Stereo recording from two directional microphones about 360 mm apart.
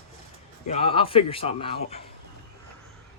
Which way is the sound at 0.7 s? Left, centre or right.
Centre.